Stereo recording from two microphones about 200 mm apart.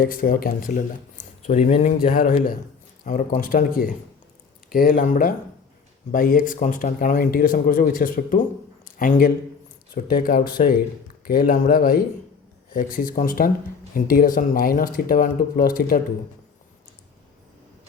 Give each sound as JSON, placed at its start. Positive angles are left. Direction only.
{"t": 0.0, "sound": "speech", "side_deg": 45}